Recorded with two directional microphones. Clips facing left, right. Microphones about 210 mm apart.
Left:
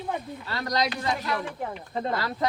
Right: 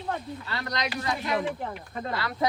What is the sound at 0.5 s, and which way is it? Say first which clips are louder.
Speech: left 5 dB; 35° left (ahead or behind).